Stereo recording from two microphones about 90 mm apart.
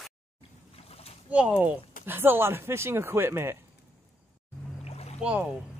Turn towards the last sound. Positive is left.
turn(degrees=-10)  # may be behind; listen again after turning